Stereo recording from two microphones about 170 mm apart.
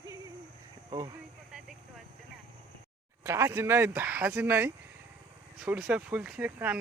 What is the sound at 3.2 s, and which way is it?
Speech, 15° right (ahead or behind).